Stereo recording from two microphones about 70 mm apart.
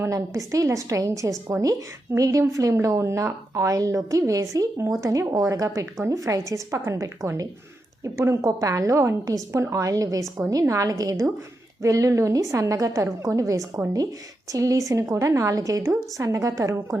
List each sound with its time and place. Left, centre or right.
0.1 s a woman's voice: right